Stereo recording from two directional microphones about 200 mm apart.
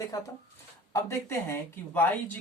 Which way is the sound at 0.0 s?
20° left (ahead or behind).